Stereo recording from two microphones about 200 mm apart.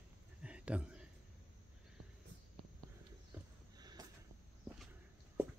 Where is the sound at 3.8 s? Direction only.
20° right (ahead or behind).